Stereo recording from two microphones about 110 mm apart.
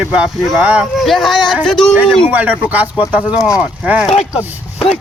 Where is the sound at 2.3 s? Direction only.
15° right (ahead or behind).